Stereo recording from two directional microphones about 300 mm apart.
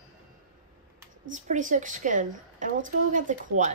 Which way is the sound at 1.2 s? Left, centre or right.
Right.